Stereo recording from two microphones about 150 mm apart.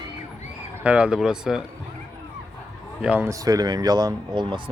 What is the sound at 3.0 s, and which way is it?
Speech, 10° right (ahead or behind).